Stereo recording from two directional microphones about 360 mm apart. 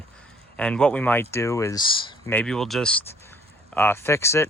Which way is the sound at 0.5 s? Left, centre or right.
Centre.